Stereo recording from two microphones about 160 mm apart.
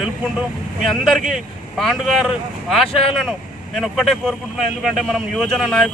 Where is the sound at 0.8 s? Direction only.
Centre (ahead or behind).